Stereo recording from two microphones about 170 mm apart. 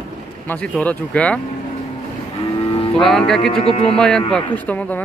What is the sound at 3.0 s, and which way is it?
Speech, centre (ahead or behind).